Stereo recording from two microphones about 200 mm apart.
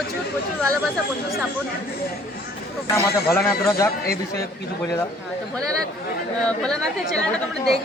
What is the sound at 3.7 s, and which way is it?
Speech, 15° left (ahead or behind).